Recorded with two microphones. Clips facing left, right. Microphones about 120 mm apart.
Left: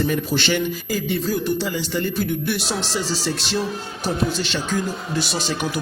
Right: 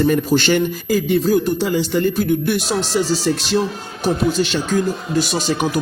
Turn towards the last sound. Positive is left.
turn(degrees=-45)  # may be behind; listen again after turning